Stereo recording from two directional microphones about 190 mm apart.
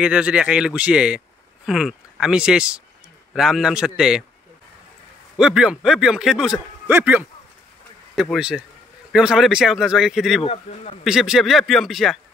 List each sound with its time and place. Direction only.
0.0 s a man's voice: 5° right (ahead or behind)
5.4 s a man's voice: 5° right (ahead or behind)
10.4 s speech: 30° left (ahead or behind)
11.1 s a man's voice: centre (ahead or behind)